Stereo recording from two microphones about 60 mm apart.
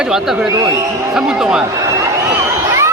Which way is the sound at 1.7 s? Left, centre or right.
Right.